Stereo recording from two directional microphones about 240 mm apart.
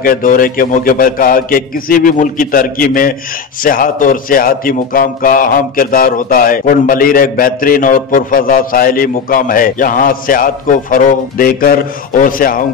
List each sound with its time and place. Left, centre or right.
0.0 s a man's voice: left